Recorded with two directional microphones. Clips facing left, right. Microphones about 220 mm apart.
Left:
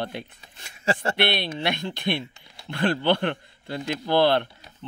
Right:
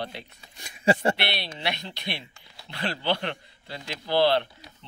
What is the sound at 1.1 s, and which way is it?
A man's voice, 50° left (ahead or behind).